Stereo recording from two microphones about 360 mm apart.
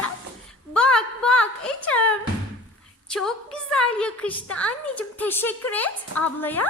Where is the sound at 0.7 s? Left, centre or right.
Centre.